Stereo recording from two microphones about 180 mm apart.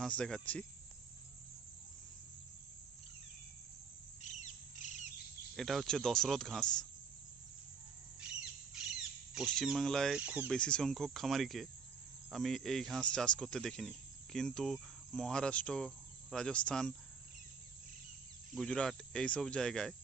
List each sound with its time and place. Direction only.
0.0 s speech: 5° left (ahead or behind)
4.2 s bird: 40° left (ahead or behind)
5.5 s speech: centre (ahead or behind)
9.3 s speech: centre (ahead or behind)
10.5 s speech: 5° left (ahead or behind)
18.5 s speech: 5° left (ahead or behind)